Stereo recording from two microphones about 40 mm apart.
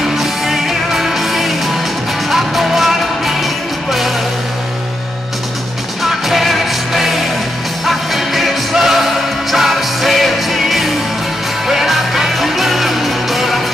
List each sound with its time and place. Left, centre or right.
0.2 s music: centre
6.0 s music: centre